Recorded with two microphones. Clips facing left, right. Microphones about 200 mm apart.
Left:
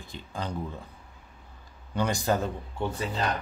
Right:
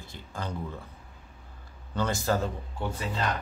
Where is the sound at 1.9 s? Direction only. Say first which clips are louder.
Left 1 dB; 15° left (ahead or behind).